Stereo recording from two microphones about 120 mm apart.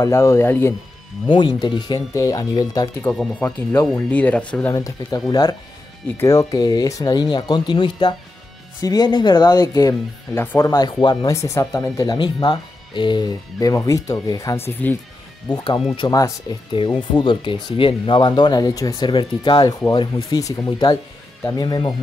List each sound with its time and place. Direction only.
0.0 s speech: 25° left (ahead or behind)
1.3 s speech: 40° left (ahead or behind)
2.1 s speech: 30° left (ahead or behind)
3.3 s speech: 10° left (ahead or behind)
4.7 s speech: 30° left (ahead or behind)
10.4 s speech: 15° left (ahead or behind)
10.7 s speech: 35° left (ahead or behind)
11.3 s speech: 25° left (ahead or behind)
16.8 s speech: 40° left (ahead or behind)